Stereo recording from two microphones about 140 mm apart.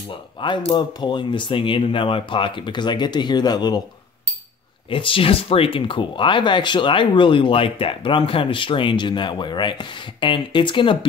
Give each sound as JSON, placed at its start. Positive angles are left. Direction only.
{"t": 0.1, "sound": "speech", "side_deg": 35}
{"t": 4.8, "sound": "speech", "side_deg": 40}